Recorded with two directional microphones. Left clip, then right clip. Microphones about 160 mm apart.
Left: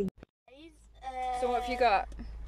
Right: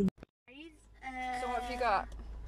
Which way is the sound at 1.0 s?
25° left (ahead or behind).